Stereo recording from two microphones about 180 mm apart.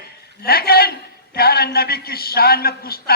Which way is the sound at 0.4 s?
60° left (ahead or behind).